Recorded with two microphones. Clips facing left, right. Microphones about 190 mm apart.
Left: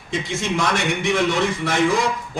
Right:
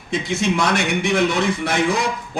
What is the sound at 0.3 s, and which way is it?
A man's voice, 65° right (ahead or behind).